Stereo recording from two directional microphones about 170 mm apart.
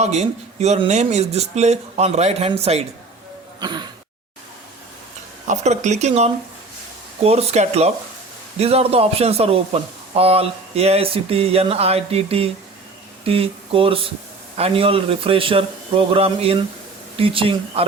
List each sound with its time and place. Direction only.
0.0 s speech: 40° right (ahead or behind)
3.6 s a sound: 25° right (ahead or behind)
5.5 s speech: 45° right (ahead or behind)